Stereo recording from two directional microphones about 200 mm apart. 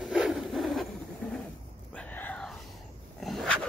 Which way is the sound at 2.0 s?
10° left (ahead or behind).